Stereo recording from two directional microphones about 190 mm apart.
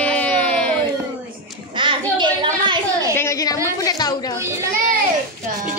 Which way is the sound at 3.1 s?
15° left (ahead or behind).